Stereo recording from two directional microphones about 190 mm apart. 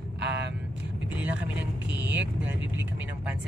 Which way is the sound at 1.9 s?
10° right (ahead or behind).